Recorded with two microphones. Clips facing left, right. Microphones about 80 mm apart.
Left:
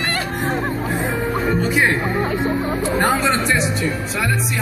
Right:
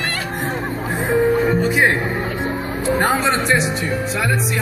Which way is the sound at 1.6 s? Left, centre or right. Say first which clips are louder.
Right 1 dB; centre.